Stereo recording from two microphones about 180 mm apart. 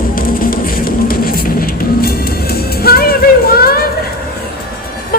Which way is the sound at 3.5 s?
60° left (ahead or behind).